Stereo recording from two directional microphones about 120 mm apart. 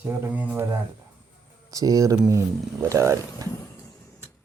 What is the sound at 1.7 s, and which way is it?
Speech, 30° right (ahead or behind).